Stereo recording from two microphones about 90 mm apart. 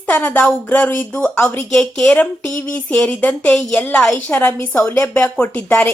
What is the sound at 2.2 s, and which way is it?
A woman's voice, 15° left (ahead or behind).